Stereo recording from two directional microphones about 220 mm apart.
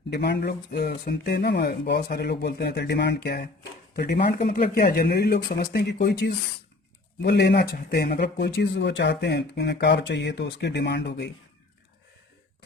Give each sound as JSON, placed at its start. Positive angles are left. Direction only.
{"t": 0.1, "sound": "speech", "side_deg": 50}